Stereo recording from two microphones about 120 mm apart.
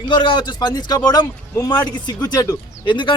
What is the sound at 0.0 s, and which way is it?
A man's voice, 40° left (ahead or behind).